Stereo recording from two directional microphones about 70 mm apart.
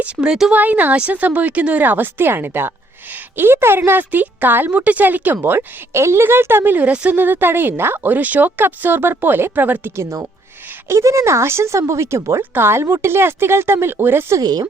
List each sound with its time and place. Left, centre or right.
0.0 s speech: centre
0.5 s a woman's voice: right
5.4 s speech: right; by 7.2 s centre
7.2 s a woman's voice: right
9.9 s speech: right
14.4 s speech: right